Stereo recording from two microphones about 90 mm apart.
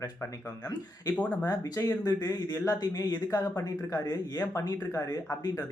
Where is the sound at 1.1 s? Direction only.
15° left (ahead or behind).